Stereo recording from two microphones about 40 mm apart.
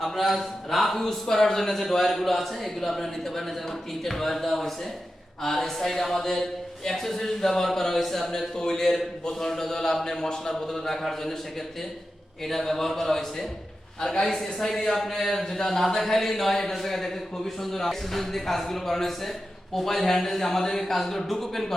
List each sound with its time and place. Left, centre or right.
0.0 s a man's voice: centre
12.5 s a man's voice: centre